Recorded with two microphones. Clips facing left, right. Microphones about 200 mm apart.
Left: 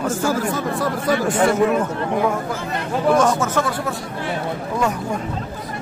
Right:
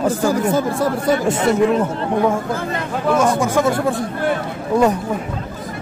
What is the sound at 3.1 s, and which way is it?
Speech, 10° right (ahead or behind).